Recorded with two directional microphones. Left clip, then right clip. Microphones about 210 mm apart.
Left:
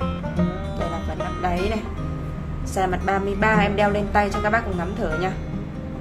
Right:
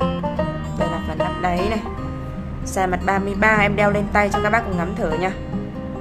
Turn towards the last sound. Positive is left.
turn(degrees=-15)  # may be behind; listen again after turning